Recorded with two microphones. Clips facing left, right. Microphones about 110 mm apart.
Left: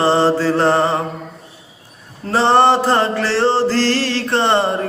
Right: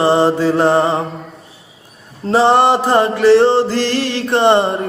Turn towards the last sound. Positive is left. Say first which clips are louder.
# right 4 dB
turn(degrees=-15)  # may be behind; listen again after turning